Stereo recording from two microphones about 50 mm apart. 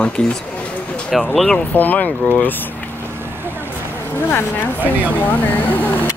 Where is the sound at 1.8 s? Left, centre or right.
Left.